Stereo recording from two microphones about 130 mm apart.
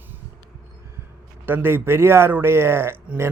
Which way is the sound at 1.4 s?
15° right (ahead or behind).